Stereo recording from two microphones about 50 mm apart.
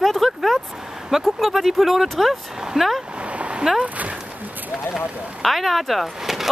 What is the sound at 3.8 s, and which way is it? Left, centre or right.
Speech, right.